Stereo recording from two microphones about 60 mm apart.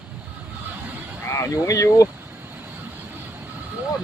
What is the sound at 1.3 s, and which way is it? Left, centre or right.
Speech, left.